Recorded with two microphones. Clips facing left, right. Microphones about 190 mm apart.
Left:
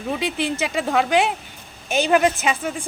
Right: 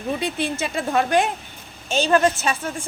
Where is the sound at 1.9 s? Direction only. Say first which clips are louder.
Even; 15° left (ahead or behind).